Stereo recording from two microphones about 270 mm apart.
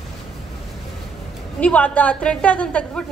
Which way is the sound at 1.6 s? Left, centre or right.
Centre.